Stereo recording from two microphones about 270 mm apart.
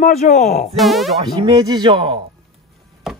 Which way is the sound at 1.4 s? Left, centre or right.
Centre.